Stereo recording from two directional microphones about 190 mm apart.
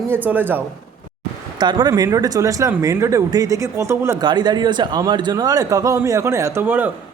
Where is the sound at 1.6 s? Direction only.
20° right (ahead or behind).